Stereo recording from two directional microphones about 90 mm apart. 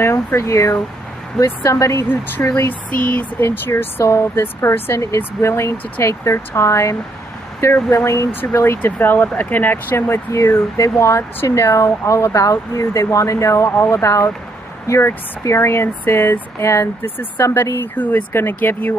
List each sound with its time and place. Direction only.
0.0 s speech: 30° left (ahead or behind)